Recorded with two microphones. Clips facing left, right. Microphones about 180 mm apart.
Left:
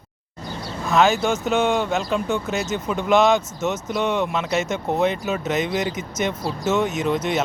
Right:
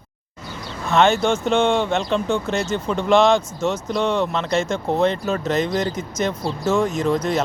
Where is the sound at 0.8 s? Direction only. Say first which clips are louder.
Right 1 dB; centre (ahead or behind).